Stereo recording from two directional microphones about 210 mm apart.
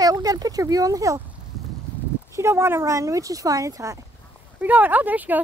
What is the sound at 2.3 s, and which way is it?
Speech, 10° right (ahead or behind).